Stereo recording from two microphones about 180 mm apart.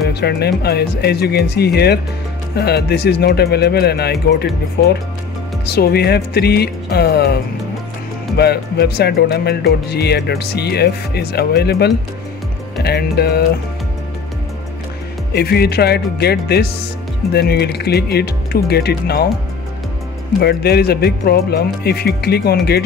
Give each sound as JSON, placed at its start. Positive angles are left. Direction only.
{"t": 0.0, "sound": "speech", "side_deg": 65}
{"t": 8.4, "sound": "speech", "side_deg": 65}
{"t": 15.3, "sound": "speech", "side_deg": 60}
{"t": 20.3, "sound": "speech", "side_deg": 60}